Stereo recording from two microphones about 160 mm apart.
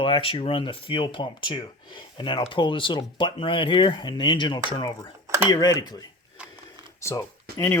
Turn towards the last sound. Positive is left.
turn(degrees=15)  # may be behind; listen again after turning